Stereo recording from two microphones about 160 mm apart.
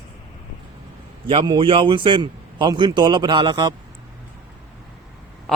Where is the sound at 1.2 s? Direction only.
30° right (ahead or behind).